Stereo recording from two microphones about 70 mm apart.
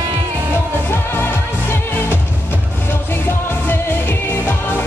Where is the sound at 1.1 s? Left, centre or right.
Left.